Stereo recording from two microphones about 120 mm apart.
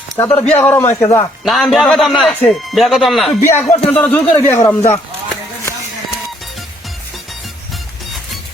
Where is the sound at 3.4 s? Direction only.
20° left (ahead or behind).